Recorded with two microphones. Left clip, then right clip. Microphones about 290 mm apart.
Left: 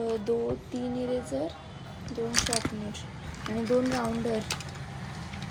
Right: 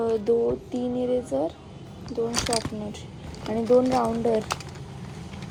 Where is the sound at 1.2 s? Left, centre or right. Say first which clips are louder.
Right 6 dB; centre.